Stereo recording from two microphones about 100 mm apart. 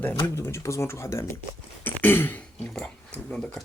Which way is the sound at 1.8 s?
20° left (ahead or behind).